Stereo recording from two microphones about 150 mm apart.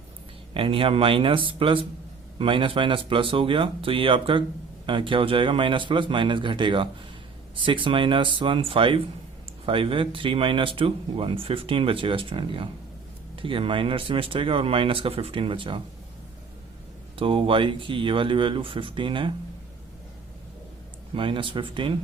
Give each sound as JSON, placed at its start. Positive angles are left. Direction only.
{"t": 0.5, "sound": "speech", "side_deg": -35}
{"t": 17.2, "sound": "speech", "side_deg": -40}
{"t": 21.2, "sound": "speech", "side_deg": -35}